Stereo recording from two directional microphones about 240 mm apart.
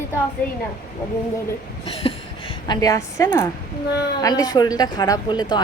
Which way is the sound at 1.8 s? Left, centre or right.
Left.